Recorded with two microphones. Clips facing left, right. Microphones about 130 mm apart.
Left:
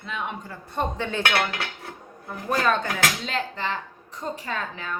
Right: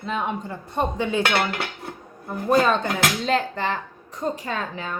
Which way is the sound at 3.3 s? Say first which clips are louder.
Right 6 dB; 45° right (ahead or behind).